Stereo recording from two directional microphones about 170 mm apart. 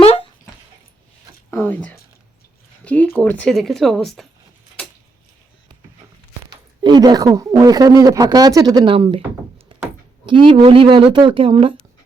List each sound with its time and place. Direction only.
1.5 s a sound: 10° left (ahead or behind)
2.8 s speech: 10° left (ahead or behind)
6.4 s speech: 25° right (ahead or behind)
10.2 s speech: 30° right (ahead or behind)